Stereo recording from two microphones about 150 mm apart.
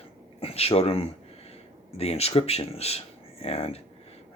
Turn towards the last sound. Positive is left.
turn(degrees=45)  # may be behind; listen again after turning